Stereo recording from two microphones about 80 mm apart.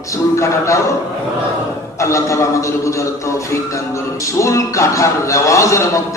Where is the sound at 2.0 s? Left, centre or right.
Left.